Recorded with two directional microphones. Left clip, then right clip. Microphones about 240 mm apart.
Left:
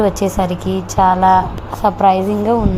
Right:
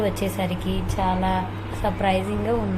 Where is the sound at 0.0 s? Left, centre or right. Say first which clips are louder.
Left 9 dB; left.